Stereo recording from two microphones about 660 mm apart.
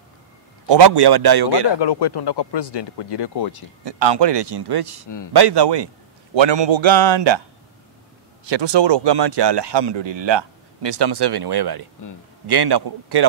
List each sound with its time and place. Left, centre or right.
0.7 s speech: right
1.8 s speech: left
3.8 s speech: right
8.5 s speech: right